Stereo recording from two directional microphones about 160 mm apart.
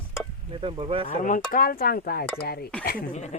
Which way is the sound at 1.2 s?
60° left (ahead or behind).